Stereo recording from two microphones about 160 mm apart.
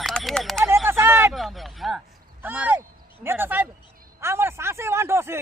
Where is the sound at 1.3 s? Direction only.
Centre (ahead or behind).